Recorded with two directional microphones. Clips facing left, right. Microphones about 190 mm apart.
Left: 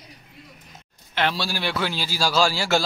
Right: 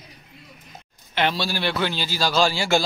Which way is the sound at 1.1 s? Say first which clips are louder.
Right 1 dB; centre (ahead or behind).